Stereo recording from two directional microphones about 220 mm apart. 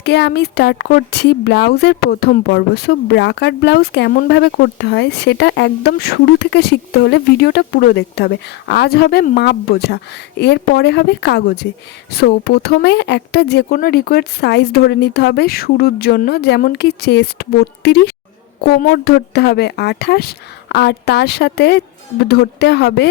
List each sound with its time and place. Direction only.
0.0 s speech: 50° left (ahead or behind)